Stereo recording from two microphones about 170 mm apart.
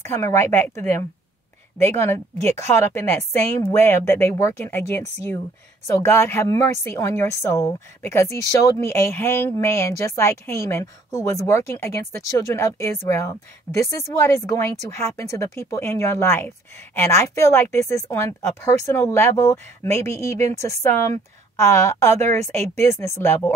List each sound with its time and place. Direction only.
0.0 s speech: 15° left (ahead or behind)